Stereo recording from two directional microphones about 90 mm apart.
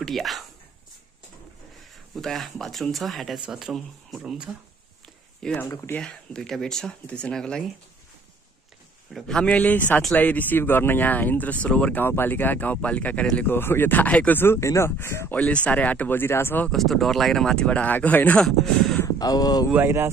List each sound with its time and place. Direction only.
0.0 s speech: centre (ahead or behind)
2.1 s speech: centre (ahead or behind)
5.0 s a sound: 5° left (ahead or behind)
5.9 s speech: 5° left (ahead or behind)
9.1 s speech: 5° left (ahead or behind)
12.0 s speech: 25° left (ahead or behind)
15.3 s speech: 15° left (ahead or behind)
16.7 s speech: centre (ahead or behind); by 18.4 s 15° left (ahead or behind)
18.4 s speech: 5° left (ahead or behind)
19.0 s speech: 45° left (ahead or behind)
19.7 s speech: 25° right (ahead or behind)